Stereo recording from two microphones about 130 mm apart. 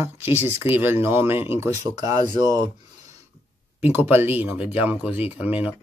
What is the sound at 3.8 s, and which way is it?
Speech, 15° right (ahead or behind).